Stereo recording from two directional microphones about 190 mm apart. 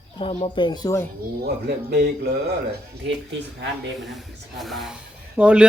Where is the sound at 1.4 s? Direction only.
55° right (ahead or behind).